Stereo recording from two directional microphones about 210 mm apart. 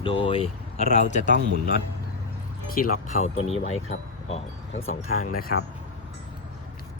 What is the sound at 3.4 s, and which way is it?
Speech, 30° left (ahead or behind).